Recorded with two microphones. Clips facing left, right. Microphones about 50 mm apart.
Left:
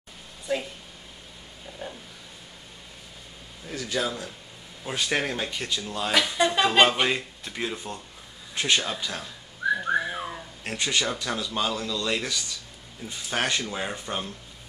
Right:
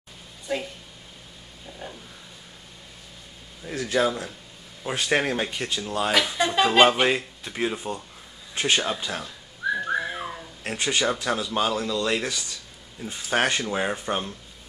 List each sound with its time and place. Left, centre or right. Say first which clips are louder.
0.5 s speech: even; centre
1.8 s a sound: left 1 dB; centre
3.6 s speech: right 5 dB; centre
9.8 s whistling: even; centre
10.7 s speech: right 3 dB; centre
13.3 s speech: right 4 dB; centre